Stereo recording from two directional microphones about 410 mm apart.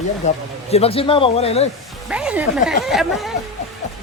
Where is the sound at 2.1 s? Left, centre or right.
Centre.